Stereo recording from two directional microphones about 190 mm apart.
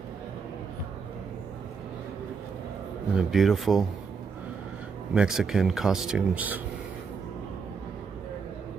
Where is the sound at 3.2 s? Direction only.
Centre (ahead or behind).